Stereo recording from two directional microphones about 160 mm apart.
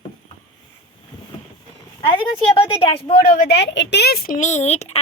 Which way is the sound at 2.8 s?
35° left (ahead or behind).